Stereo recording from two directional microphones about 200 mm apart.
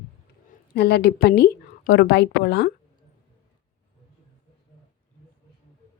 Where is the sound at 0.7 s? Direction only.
55° left (ahead or behind).